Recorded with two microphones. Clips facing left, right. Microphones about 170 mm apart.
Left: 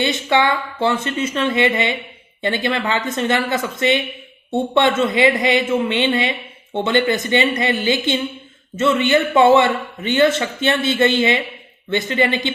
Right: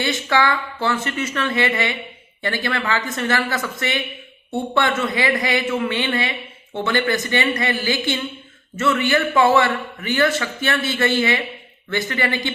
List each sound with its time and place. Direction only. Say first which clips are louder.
0.0 s a man's voice: left 3 dB; 20° left (ahead or behind)